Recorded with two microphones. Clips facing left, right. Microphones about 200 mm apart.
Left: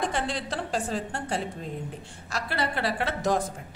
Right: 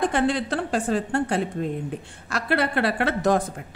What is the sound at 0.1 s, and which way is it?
A woman's voice, 55° right (ahead or behind).